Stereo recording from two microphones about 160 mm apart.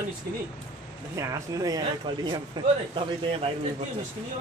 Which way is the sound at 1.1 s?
20° right (ahead or behind).